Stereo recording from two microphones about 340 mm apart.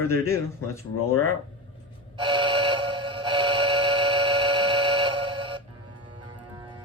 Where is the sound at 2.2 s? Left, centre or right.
Centre.